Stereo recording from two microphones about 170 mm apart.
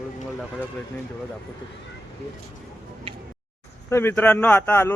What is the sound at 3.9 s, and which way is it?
Speech, 10° left (ahead or behind).